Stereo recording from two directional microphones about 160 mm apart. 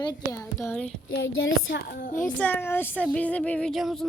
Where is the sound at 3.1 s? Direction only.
10° left (ahead or behind).